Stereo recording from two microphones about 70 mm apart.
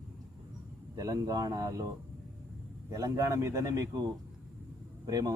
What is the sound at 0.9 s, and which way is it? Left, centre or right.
Speech, right.